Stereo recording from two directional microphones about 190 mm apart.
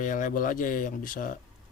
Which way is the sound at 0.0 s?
45° left (ahead or behind).